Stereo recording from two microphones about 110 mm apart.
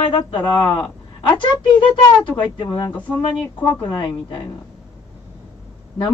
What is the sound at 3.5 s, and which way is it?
Speech, 15° left (ahead or behind).